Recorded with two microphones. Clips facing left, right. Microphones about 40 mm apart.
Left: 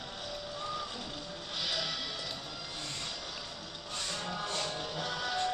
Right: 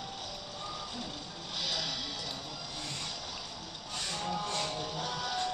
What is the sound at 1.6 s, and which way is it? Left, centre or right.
Music, centre.